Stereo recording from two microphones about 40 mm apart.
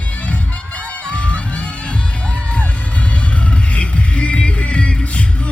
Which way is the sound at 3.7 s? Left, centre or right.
Left.